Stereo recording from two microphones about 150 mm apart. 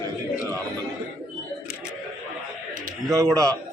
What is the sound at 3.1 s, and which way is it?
Speech, 20° right (ahead or behind).